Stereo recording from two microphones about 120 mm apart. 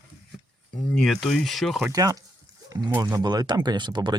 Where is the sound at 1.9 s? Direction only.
30° right (ahead or behind).